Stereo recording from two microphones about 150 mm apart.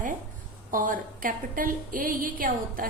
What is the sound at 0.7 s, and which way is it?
A woman's voice, 65° right (ahead or behind).